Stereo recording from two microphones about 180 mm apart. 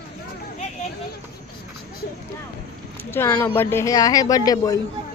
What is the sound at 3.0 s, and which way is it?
Speech, 10° left (ahead or behind).